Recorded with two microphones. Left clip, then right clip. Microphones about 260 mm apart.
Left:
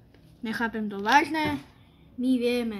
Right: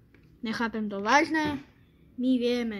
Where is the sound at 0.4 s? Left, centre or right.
Centre.